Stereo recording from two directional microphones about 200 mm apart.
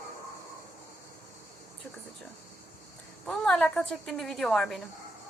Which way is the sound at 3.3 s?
5° left (ahead or behind).